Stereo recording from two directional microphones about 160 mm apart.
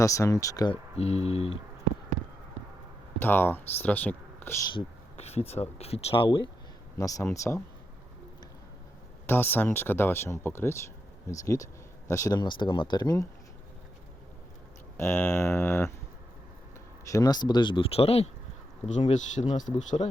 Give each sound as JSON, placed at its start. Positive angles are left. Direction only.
{"t": 0.0, "sound": "speech", "side_deg": 20}
{"t": 0.9, "sound": "speech", "side_deg": 40}
{"t": 3.2, "sound": "speech", "side_deg": 10}
{"t": 4.7, "sound": "speech", "side_deg": 40}
{"t": 7.0, "sound": "speech", "side_deg": 20}
{"t": 9.2, "sound": "speech", "side_deg": 15}
{"t": 14.9, "sound": "speech", "side_deg": 15}
{"t": 17.1, "sound": "speech", "side_deg": 25}